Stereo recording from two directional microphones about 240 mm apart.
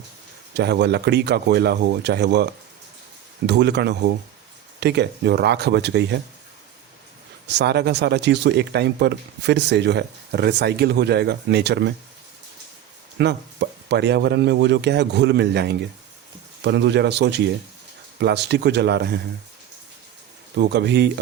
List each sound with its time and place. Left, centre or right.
0.5 s speech: right
7.4 s speech: right
13.1 s speech: right
20.6 s speech: right